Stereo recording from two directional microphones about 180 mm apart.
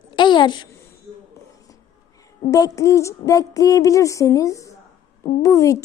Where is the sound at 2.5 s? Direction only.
20° left (ahead or behind).